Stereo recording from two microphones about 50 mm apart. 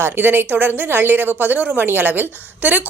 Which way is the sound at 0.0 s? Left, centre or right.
Right.